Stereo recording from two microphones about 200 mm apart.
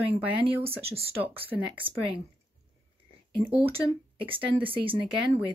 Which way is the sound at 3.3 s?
25° right (ahead or behind).